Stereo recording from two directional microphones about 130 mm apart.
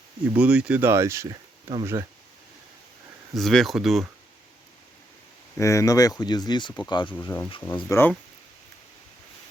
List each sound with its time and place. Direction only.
0.3 s speech: 10° right (ahead or behind)
3.3 s speech: centre (ahead or behind)
5.5 s speech: 25° left (ahead or behind)
7.3 s speech: 15° left (ahead or behind)